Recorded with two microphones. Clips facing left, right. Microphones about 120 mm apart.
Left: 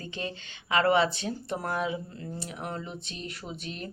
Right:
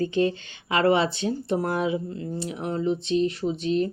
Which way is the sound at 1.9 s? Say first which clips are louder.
Right 8 dB; 25° right (ahead or behind).